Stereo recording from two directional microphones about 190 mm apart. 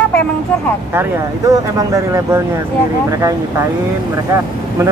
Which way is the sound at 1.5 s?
15° right (ahead or behind).